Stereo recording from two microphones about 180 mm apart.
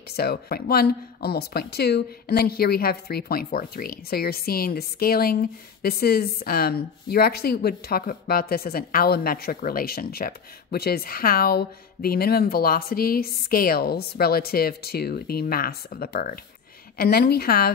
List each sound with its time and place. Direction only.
0.1 s speech: 60° left (ahead or behind)